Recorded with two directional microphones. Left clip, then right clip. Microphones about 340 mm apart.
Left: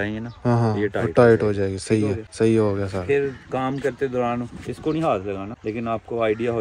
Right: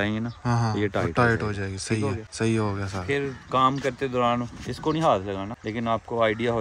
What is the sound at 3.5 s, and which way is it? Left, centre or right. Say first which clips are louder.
Speech: right 3 dB; centre.